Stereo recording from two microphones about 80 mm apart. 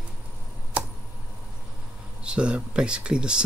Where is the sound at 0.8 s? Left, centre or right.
Centre.